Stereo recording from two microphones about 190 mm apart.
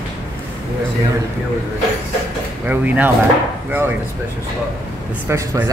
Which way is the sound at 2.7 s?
10° right (ahead or behind).